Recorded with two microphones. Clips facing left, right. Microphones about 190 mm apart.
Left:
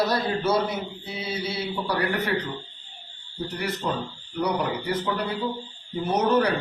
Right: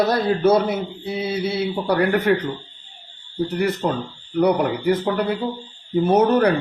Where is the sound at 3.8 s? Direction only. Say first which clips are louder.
Right 5 dB; 45° right (ahead or behind).